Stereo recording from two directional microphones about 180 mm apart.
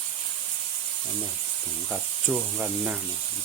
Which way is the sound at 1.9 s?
5° right (ahead or behind).